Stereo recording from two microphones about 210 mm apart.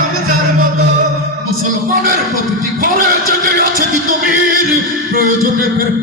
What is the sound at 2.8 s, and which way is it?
Speech, 40° right (ahead or behind).